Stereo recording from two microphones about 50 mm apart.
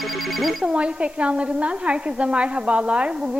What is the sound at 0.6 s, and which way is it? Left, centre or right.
A woman's voice, right.